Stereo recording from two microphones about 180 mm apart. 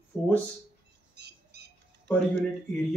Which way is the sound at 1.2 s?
65° right (ahead or behind).